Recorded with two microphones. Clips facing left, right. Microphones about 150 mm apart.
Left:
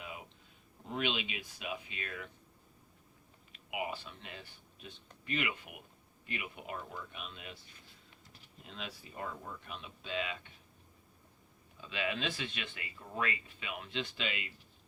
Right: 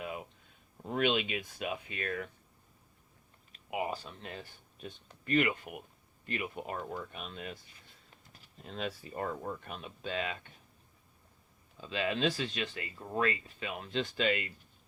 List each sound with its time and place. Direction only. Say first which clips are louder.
0.9 s speech: right 6 dB; 50° right (ahead or behind)
3.5 s speech: right 4 dB; 40° right (ahead or behind)
8.6 s speech: right 8 dB; 45° right (ahead or behind)
11.8 s speech: right 5 dB; 35° right (ahead or behind)